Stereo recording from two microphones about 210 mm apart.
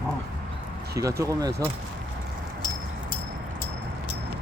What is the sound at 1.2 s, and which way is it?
Speech, 15° right (ahead or behind).